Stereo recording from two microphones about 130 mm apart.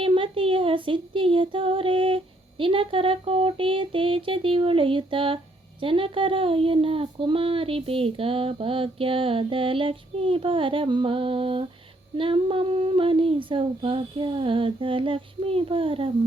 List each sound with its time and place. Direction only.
0.0 s female singing: 40° right (ahead or behind)
5.8 s child singing: 40° right (ahead or behind)